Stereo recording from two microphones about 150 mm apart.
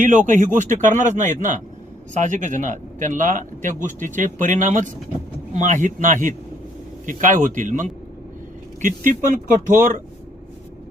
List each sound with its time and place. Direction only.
0.0 s a man's voice: 60° right (ahead or behind)